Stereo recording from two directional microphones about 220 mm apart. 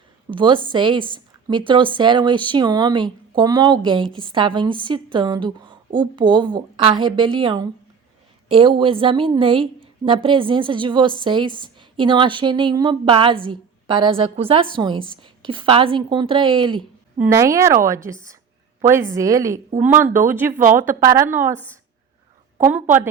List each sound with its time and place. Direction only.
0.3 s a woman's voice: 20° right (ahead or behind)
22.6 s a woman's voice: 10° right (ahead or behind)